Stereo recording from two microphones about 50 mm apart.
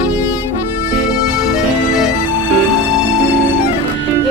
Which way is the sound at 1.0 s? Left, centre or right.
Centre.